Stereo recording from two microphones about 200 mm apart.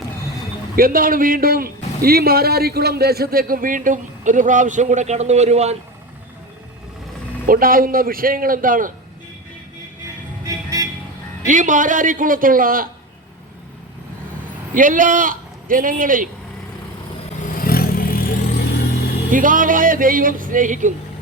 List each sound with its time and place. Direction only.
0.8 s a man's voice: 45° right (ahead or behind)
7.4 s a man's voice: 45° right (ahead or behind)
10.4 s music: 15° right (ahead or behind)
11.4 s a man's voice: 40° right (ahead or behind)
14.7 s a man's voice: 40° right (ahead or behind)
17.6 s vehicle: 45° left (ahead or behind)
19.3 s speech: 40° right (ahead or behind)